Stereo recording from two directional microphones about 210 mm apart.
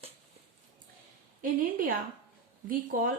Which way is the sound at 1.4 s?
40° right (ahead or behind).